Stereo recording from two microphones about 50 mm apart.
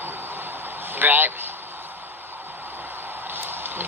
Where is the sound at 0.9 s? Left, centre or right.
Right.